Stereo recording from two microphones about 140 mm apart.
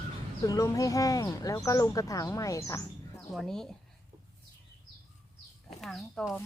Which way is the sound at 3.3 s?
5° left (ahead or behind).